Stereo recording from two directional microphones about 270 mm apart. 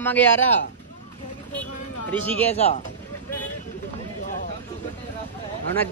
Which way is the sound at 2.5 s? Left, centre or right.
Left.